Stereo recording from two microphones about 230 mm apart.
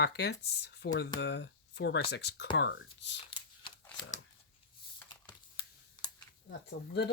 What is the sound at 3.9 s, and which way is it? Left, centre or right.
Shuffling cards, centre.